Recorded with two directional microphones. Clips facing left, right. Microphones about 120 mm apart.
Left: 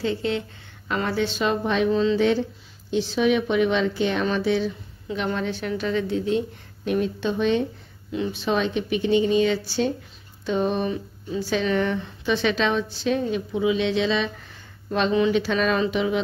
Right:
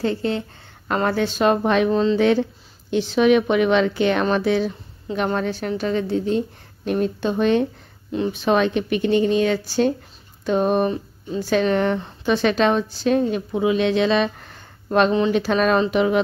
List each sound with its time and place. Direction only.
0.0 s speech: 45° right (ahead or behind)
1.9 s speech: 40° right (ahead or behind)
2.1 s speech: 60° right (ahead or behind)